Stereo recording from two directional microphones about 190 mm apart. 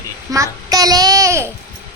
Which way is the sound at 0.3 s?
15° right (ahead or behind).